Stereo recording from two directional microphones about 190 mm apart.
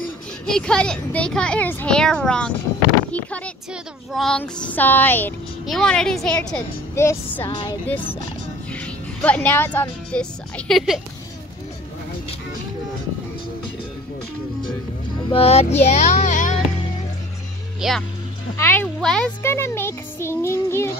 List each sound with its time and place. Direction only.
0.5 s a child's voice: 5° left (ahead or behind)
7.4 s speech: 25° left (ahead or behind)
8.7 s speech: 5° left (ahead or behind)
10.7 s a child's voice: centre (ahead or behind)
15.2 s speech: 30° left (ahead or behind)
17.7 s speech: centre (ahead or behind)
18.6 s a child's voice: 10° left (ahead or behind)
19.4 s music: 15° left (ahead or behind)